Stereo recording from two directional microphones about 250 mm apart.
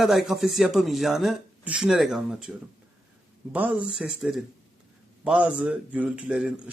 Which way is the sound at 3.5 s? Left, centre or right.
Centre.